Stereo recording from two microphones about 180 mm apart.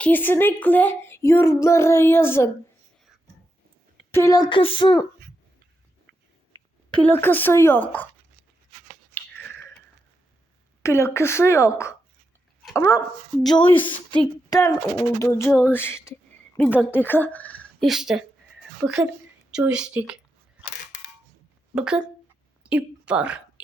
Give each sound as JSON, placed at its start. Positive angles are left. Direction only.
{"t": 0.0, "sound": "speech", "side_deg": 10}
{"t": 4.1, "sound": "a sound", "side_deg": 15}
{"t": 6.9, "sound": "speech", "side_deg": 10}
{"t": 9.1, "sound": "chewing", "side_deg": 10}
{"t": 10.8, "sound": "speech", "side_deg": 15}
{"t": 13.5, "sound": "a sound", "side_deg": 25}
{"t": 15.2, "sound": "a woman's voice", "side_deg": 15}
{"t": 21.8, "sound": "speech", "side_deg": -5}
{"t": 22.6, "sound": "a sound", "side_deg": -5}